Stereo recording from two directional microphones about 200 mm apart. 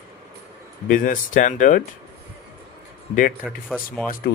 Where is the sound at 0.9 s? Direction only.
40° left (ahead or behind).